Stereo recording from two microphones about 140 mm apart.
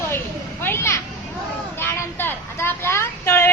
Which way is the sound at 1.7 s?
15° left (ahead or behind).